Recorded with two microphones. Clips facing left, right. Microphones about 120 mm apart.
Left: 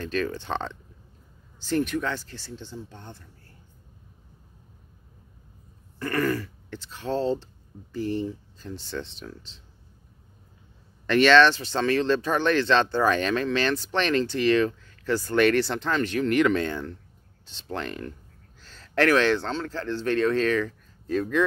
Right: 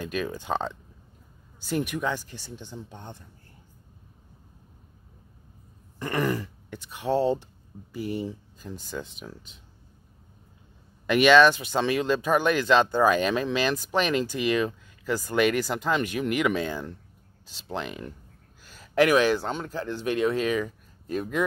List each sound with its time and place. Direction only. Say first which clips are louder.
0.0 s speech: left 2 dB; 10° right (ahead or behind)
5.9 s speech: left 1 dB; 15° right (ahead or behind)
11.1 s speech: even; 10° right (ahead or behind)